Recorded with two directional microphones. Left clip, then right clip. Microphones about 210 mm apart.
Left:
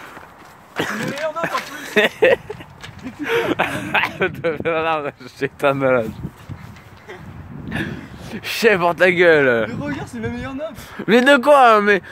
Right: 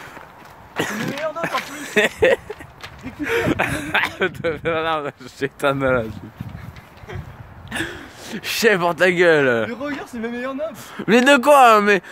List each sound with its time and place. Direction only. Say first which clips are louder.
0.7 s a sound: left 1 dB; 5° left (ahead or behind)
1.8 s speech: left 2 dB; 10° left (ahead or behind)
7.7 s speech: right 1 dB; 5° right (ahead or behind)
9.8 s speech: even; 15° right (ahead or behind)
11.0 s speech: left 1 dB; centre (ahead or behind)